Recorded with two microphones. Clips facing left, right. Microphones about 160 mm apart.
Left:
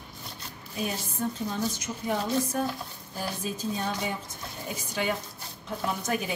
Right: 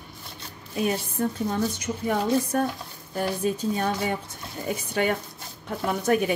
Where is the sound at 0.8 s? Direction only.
60° right (ahead or behind).